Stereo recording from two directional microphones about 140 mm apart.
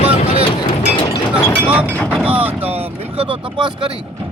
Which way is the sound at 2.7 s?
45° right (ahead or behind).